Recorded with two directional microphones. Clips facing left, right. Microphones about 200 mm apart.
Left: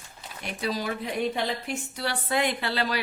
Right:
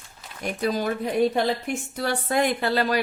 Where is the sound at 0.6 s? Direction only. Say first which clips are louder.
Right 5 dB; 50° right (ahead or behind).